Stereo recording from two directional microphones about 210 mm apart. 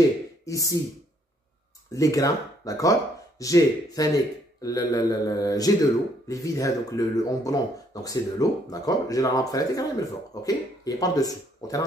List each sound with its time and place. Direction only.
0.5 s speech: 15° left (ahead or behind)
1.9 s speech: 15° left (ahead or behind)